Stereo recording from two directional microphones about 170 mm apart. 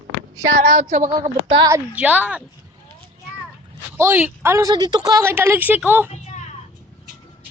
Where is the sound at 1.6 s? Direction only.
15° right (ahead or behind).